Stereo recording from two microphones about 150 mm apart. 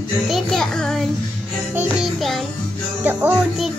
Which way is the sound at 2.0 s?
Centre (ahead or behind).